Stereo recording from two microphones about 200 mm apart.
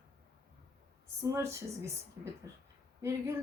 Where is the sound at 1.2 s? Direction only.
15° right (ahead or behind).